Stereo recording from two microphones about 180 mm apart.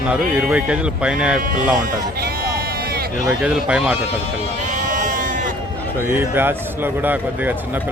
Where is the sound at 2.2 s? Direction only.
55° right (ahead or behind).